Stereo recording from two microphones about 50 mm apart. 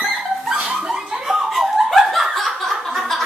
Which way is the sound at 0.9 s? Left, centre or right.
Centre.